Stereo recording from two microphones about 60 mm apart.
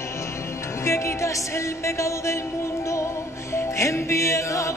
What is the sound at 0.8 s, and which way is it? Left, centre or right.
Music, left.